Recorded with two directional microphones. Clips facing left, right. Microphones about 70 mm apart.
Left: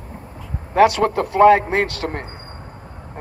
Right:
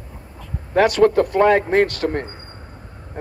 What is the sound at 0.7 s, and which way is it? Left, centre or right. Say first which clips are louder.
A man's voice: right 1 dB; centre.